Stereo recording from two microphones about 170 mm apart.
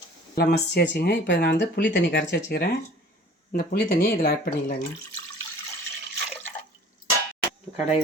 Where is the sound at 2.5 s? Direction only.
65° left (ahead or behind).